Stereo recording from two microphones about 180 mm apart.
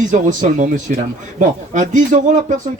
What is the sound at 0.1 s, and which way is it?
Speech, 45° right (ahead or behind).